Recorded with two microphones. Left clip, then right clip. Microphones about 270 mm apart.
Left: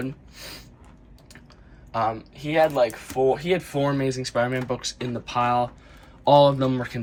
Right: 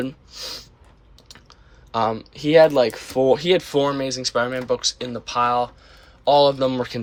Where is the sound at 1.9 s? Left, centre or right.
Centre.